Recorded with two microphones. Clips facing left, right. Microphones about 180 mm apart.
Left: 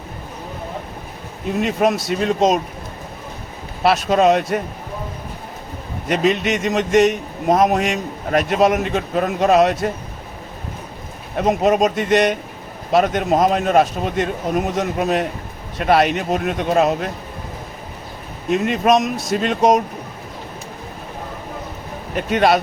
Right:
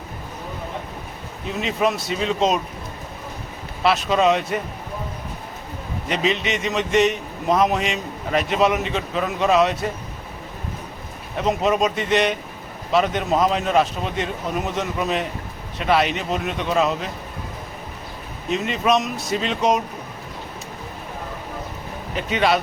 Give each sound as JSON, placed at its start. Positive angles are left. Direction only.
{"t": 1.5, "sound": "a man's voice", "side_deg": 50}
{"t": 3.8, "sound": "a man's voice", "side_deg": 45}
{"t": 6.1, "sound": "a man's voice", "side_deg": 50}
{"t": 11.3, "sound": "a man's voice", "side_deg": 50}
{"t": 18.4, "sound": "a man's voice", "side_deg": 50}
{"t": 22.1, "sound": "a man's voice", "side_deg": 50}